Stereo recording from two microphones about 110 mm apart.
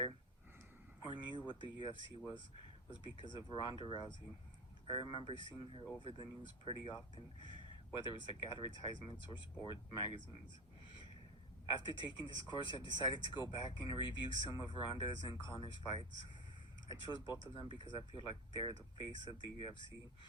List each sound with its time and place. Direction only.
1.0 s speech: 45° left (ahead or behind)
11.7 s speech: 45° left (ahead or behind)